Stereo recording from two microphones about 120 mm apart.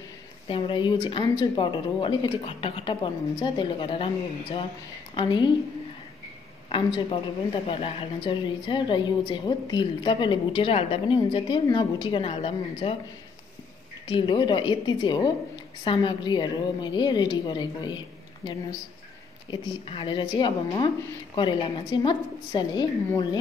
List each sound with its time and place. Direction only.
0.5 s a woman's voice: 45° left (ahead or behind)
6.7 s a woman's voice: 45° left (ahead or behind)
14.0 s a woman's voice: 40° left (ahead or behind)